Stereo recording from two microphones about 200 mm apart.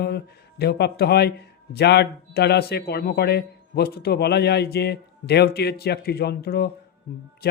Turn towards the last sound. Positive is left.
turn(degrees=50)  # may be behind; listen again after turning